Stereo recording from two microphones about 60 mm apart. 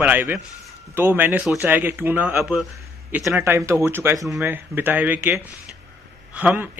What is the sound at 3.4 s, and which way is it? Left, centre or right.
Speech, right.